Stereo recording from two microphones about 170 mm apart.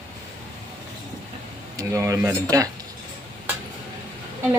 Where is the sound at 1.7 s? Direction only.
20° right (ahead or behind).